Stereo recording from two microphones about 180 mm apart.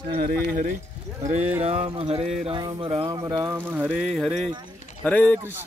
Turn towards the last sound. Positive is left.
turn(degrees=10)  # may be behind; listen again after turning